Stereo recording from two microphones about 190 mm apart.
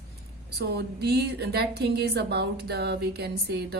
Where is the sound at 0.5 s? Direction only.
60° right (ahead or behind).